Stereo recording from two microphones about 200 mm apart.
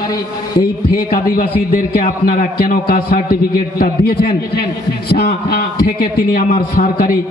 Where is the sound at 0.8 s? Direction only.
45° left (ahead or behind).